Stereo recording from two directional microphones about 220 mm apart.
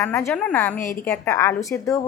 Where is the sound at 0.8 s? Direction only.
35° left (ahead or behind).